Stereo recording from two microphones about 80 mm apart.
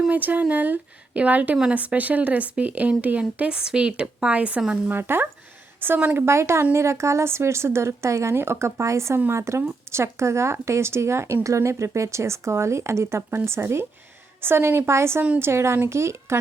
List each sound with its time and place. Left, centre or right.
0.1 s a woman's voice: right
4.9 s a woman's voice: right